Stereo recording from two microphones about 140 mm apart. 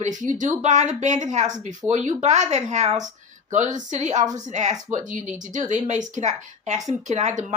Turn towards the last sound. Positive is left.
turn(degrees=-60)  # may be behind; listen again after turning